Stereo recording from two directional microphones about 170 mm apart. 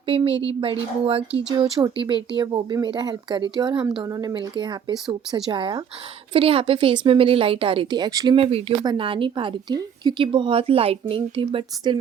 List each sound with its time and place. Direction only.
0.1 s a woman's voice: 35° right (ahead or behind)